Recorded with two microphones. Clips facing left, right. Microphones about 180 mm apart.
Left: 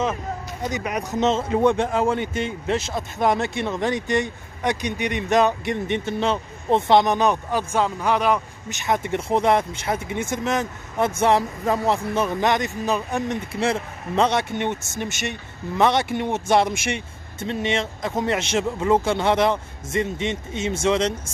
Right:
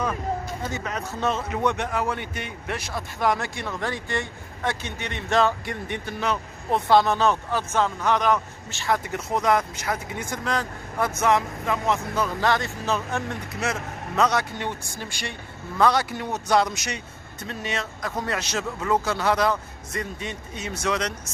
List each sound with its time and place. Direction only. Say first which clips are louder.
0.7 s a man's voice: left 8 dB; 15° left (ahead or behind)
13.5 s a man's voice: left 5 dB; 30° left (ahead or behind)